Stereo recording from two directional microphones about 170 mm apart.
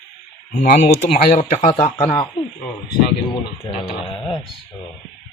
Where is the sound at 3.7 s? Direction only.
30° left (ahead or behind).